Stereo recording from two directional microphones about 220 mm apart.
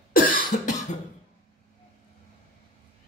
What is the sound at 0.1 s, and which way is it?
Cough, 40° left (ahead or behind).